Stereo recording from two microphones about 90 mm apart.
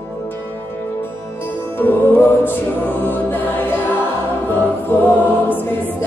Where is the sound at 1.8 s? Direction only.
20° left (ahead or behind).